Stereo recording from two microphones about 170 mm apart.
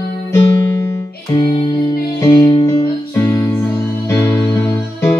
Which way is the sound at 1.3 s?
30° left (ahead or behind).